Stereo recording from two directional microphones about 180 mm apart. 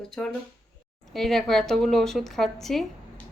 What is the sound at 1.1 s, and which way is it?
Speech, centre (ahead or behind).